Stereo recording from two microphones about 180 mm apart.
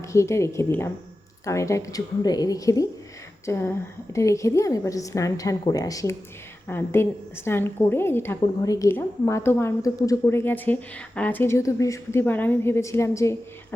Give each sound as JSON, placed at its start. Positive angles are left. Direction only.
{"t": 0.1, "sound": "a woman's voice", "side_deg": 15}